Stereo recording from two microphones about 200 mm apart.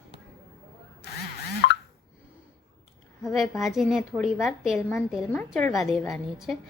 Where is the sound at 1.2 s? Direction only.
50° left (ahead or behind).